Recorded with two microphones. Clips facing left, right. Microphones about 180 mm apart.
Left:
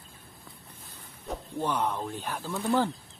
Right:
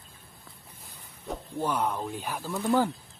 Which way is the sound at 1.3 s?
10° right (ahead or behind).